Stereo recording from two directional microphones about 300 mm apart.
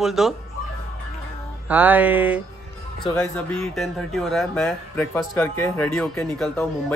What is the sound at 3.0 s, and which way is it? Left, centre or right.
Speech, centre.